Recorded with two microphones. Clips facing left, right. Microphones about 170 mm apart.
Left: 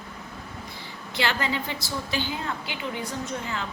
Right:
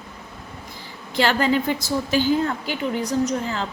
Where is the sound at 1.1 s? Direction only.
45° right (ahead or behind).